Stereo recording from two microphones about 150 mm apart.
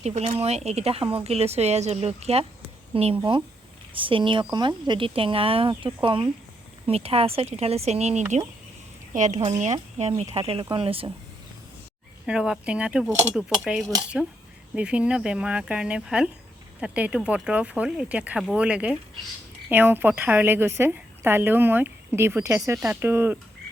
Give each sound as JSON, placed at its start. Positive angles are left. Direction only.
{"t": 0.0, "sound": "speech", "side_deg": -45}
{"t": 12.2, "sound": "a woman's voice", "side_deg": -5}